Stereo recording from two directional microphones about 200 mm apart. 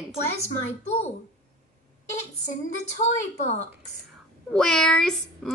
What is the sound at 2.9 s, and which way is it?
Speech, 35° left (ahead or behind).